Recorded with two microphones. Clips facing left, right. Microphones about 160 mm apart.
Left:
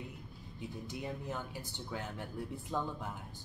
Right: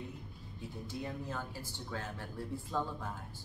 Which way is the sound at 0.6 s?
20° left (ahead or behind).